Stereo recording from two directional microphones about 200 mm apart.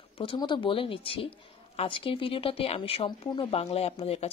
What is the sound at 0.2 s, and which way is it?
Speech, 25° left (ahead or behind).